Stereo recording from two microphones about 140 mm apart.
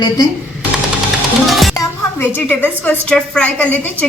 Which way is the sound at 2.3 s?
15° left (ahead or behind).